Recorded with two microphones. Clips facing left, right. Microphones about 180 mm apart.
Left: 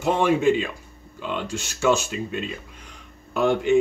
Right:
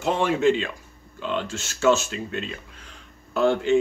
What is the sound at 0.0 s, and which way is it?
Speech, 10° left (ahead or behind).